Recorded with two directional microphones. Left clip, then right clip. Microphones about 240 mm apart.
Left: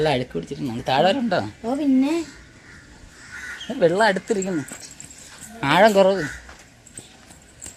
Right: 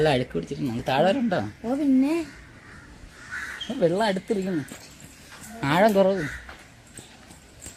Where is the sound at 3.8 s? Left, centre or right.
Left.